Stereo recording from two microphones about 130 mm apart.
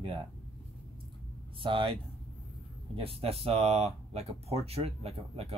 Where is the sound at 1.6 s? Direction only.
40° right (ahead or behind).